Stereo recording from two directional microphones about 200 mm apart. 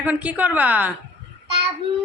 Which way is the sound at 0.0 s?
5° right (ahead or behind).